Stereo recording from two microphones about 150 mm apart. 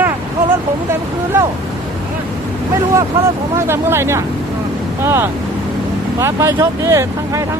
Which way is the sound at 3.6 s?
15° right (ahead or behind).